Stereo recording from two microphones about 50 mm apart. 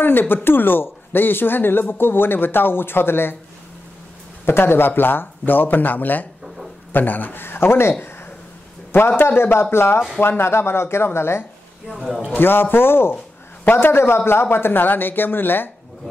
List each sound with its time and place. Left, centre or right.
0.0 s speech: left
4.5 s speech: left
8.9 s speech: left
11.9 s a man's voice: centre
12.3 s speech: left